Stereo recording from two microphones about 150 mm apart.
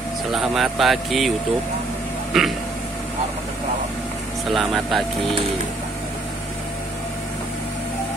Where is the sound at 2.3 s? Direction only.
Centre (ahead or behind).